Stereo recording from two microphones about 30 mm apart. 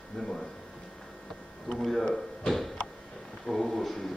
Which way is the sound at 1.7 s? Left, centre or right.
Centre.